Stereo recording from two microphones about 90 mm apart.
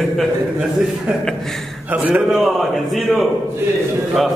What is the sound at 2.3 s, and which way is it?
A man's voice, centre (ahead or behind).